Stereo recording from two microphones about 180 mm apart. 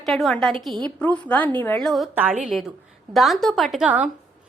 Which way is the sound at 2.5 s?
Centre (ahead or behind).